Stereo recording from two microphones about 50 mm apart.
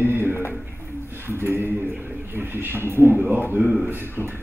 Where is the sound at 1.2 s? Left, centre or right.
Right.